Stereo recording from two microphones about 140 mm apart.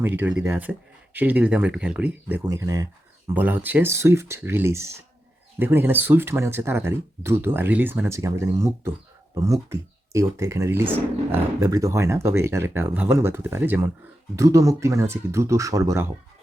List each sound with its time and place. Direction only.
0.0 s speech: 15° right (ahead or behind)
2.4 s speech: 25° right (ahead or behind)
3.3 s speech: 10° right (ahead or behind)